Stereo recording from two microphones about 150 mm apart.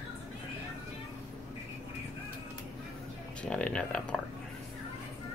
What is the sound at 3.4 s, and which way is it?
Speech, 5° left (ahead or behind).